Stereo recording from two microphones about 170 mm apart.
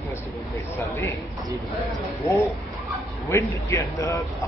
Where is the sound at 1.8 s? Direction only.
Centre (ahead or behind).